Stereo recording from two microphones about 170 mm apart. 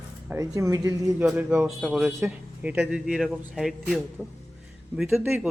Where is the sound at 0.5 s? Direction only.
20° right (ahead or behind).